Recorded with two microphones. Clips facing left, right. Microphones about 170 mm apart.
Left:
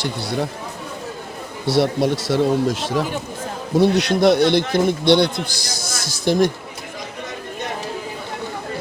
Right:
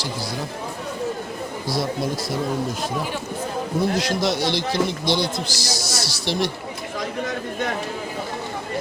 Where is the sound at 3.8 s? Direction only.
65° left (ahead or behind); by 6.5 s 50° left (ahead or behind).